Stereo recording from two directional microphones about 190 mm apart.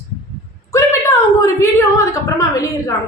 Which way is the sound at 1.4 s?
15° left (ahead or behind).